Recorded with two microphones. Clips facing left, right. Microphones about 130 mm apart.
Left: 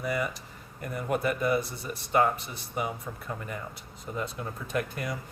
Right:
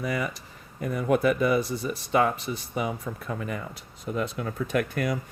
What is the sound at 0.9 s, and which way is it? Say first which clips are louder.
Speech: right 6 dB; 90° right.